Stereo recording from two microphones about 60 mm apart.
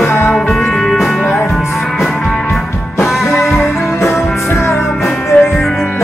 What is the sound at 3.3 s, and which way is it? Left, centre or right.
Music, centre.